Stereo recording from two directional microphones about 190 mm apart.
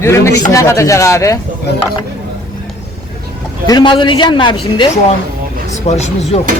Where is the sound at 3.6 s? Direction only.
20° left (ahead or behind).